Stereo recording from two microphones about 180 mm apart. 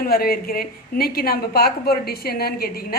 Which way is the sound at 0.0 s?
55° left (ahead or behind).